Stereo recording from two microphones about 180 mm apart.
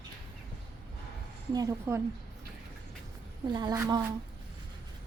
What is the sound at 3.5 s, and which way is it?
Speech, 25° right (ahead or behind).